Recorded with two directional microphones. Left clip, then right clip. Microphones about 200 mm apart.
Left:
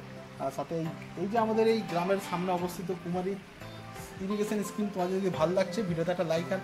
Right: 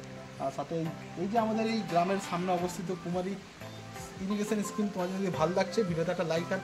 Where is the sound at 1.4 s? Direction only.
10° right (ahead or behind).